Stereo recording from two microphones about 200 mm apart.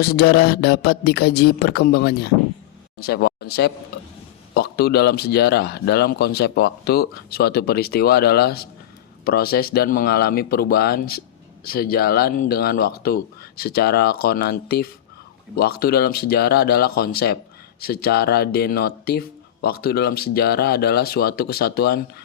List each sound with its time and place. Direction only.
0.0 s speech: 50° left (ahead or behind)